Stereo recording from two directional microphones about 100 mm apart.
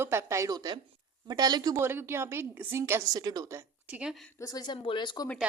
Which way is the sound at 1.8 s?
25° right (ahead or behind).